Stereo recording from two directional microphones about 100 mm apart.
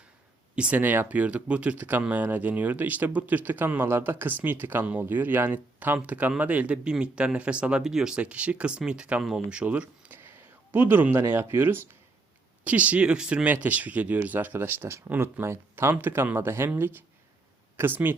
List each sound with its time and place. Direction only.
0.5 s speech: 10° right (ahead or behind)
10.2 s a sound: 20° right (ahead or behind)
11.5 s speech: 20° right (ahead or behind)